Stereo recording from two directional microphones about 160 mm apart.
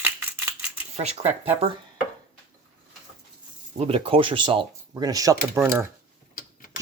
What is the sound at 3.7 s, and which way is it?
Speech, 35° right (ahead or behind).